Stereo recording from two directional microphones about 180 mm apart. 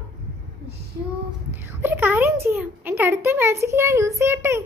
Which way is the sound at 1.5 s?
10° right (ahead or behind).